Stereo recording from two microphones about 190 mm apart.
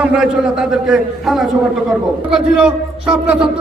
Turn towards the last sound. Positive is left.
turn(degrees=-5)  # may be behind; listen again after turning